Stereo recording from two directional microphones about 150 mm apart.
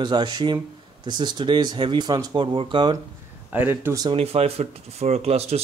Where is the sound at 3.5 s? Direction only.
10° right (ahead or behind).